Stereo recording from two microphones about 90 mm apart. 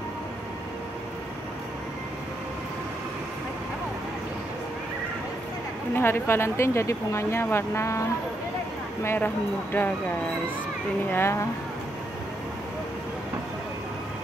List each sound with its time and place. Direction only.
5.9 s speech: 25° left (ahead or behind)